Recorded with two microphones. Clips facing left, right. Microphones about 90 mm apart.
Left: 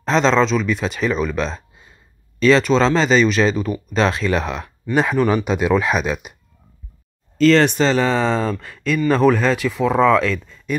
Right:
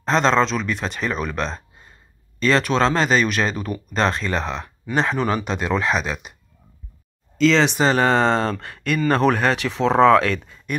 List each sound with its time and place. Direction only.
0.0 s speech: centre (ahead or behind)
7.4 s speech: centre (ahead or behind)
7.9 s speech: 60° right (ahead or behind)